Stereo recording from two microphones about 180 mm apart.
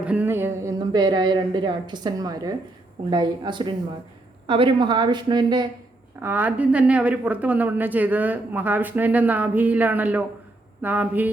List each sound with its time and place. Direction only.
0.0 s a woman's voice: 10° right (ahead or behind); by 5.6 s 25° right (ahead or behind)
6.2 s speech: 10° right (ahead or behind)